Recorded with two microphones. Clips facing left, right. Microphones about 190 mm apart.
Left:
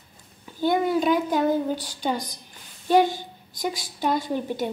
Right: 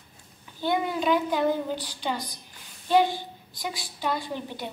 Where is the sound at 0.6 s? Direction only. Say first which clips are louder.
Left 4 dB; 45° left (ahead or behind).